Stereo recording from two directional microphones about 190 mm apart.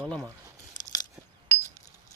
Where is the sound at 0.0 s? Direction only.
Centre (ahead or behind).